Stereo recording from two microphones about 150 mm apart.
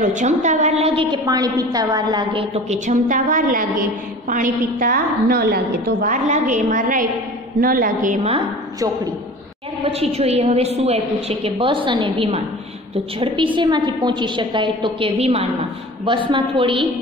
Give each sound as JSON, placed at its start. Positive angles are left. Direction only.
{"t": 0.0, "sound": "a woman's voice", "side_deg": -55}
{"t": 2.5, "sound": "a woman's voice", "side_deg": -50}
{"t": 9.8, "sound": "a woman's voice", "side_deg": -40}